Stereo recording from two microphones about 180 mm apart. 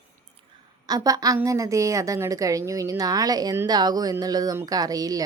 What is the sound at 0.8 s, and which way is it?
A woman's voice, 20° right (ahead or behind).